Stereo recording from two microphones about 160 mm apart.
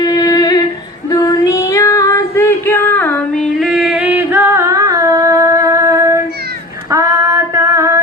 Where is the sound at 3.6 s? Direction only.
Centre (ahead or behind); by 6.2 s 20° right (ahead or behind).